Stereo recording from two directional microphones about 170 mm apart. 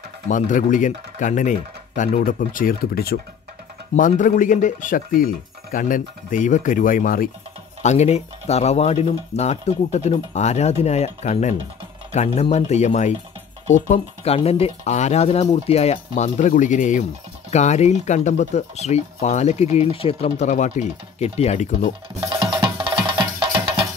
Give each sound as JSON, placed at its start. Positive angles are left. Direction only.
{"t": 0.3, "sound": "speech", "side_deg": 50}
{"t": 3.9, "sound": "speech", "side_deg": 50}
{"t": 7.8, "sound": "speech", "side_deg": 40}
{"t": 22.2, "sound": "music", "side_deg": -25}